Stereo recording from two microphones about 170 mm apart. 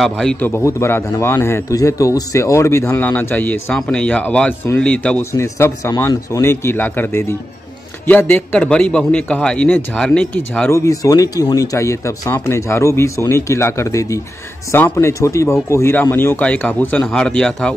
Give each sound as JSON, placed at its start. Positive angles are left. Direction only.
{"t": 0.0, "sound": "a man's voice", "side_deg": 5}
{"t": 10.9, "sound": "a man's voice", "side_deg": 20}